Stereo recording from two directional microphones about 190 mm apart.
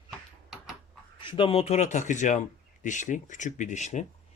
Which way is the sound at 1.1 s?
25° left (ahead or behind).